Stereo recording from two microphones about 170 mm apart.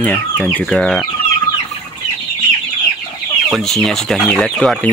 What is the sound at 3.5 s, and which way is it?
Speech, centre (ahead or behind).